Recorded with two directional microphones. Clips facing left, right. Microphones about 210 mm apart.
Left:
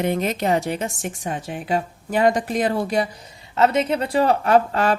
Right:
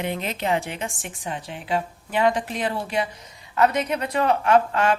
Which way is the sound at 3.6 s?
25° left (ahead or behind).